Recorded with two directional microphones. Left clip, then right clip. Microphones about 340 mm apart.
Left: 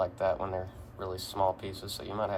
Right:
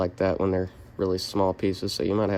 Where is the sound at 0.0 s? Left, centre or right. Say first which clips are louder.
Right 5 dB; right.